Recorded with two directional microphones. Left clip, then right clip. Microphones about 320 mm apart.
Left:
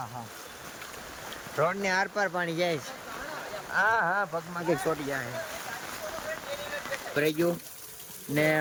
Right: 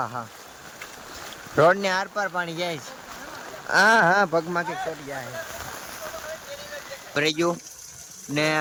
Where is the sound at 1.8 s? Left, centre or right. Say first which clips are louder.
Right 2 dB; centre.